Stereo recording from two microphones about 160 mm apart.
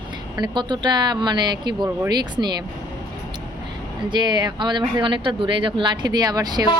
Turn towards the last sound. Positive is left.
turn(degrees=-25)  # may be behind; listen again after turning